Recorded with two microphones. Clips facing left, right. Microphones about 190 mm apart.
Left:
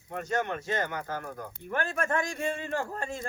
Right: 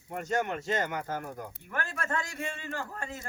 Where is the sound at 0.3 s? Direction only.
15° right (ahead or behind).